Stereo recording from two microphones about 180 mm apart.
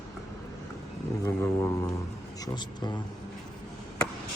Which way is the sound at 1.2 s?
15° left (ahead or behind).